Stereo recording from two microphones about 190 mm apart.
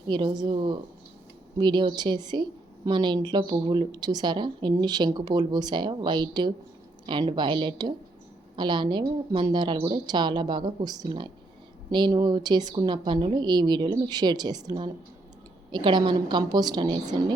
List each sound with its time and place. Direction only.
0.1 s a woman's voice: 25° right (ahead or behind)